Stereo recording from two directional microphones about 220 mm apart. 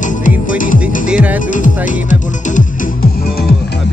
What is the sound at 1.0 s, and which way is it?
Music, 5° right (ahead or behind).